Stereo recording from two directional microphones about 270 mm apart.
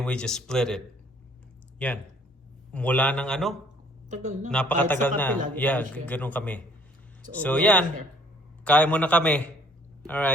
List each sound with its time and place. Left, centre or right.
0.0 s a man's voice: centre
2.7 s a man's voice: centre
4.1 s speech: right
4.5 s a man's voice: centre